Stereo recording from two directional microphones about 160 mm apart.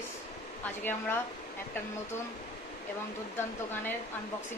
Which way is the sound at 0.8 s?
15° left (ahead or behind).